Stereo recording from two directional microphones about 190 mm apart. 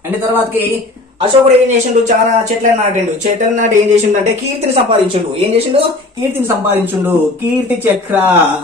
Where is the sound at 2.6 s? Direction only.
40° right (ahead or behind).